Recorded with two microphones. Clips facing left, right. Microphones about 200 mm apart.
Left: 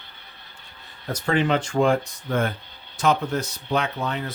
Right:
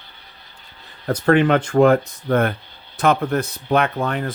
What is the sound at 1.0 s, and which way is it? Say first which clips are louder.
Speech: right 7 dB; 60° right (ahead or behind).